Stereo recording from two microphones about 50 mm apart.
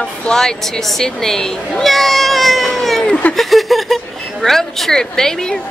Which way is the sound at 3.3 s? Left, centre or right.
Centre.